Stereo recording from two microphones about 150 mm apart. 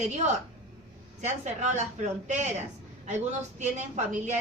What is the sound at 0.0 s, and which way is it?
A woman's voice, 50° right (ahead or behind).